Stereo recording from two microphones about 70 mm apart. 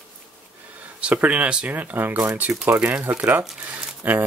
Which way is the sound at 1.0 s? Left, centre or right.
Centre.